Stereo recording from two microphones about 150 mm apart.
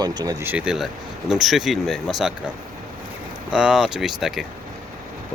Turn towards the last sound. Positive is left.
turn(degrees=0)  # may be behind; listen again after turning